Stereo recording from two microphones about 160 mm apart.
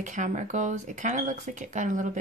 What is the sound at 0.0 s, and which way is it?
Speech, 50° right (ahead or behind).